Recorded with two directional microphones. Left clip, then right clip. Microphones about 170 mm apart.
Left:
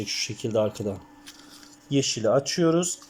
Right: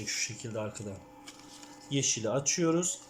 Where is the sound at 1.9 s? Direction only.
5° left (ahead or behind).